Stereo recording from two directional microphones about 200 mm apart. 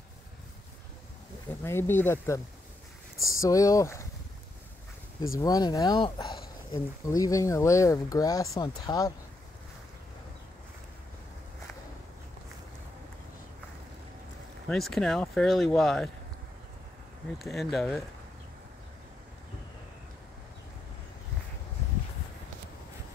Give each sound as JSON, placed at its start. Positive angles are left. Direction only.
{"t": 1.6, "sound": "speech", "side_deg": 10}
{"t": 5.4, "sound": "speech", "side_deg": 20}
{"t": 14.7, "sound": "speech", "side_deg": 0}
{"t": 17.4, "sound": "speech", "side_deg": 0}